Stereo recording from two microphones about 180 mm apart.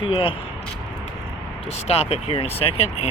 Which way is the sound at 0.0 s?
30° left (ahead or behind).